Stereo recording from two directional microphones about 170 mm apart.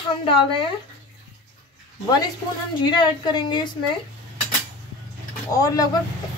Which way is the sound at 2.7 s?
25° left (ahead or behind).